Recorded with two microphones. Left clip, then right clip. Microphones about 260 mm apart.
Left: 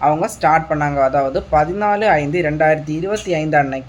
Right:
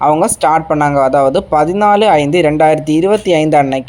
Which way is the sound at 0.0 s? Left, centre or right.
Right.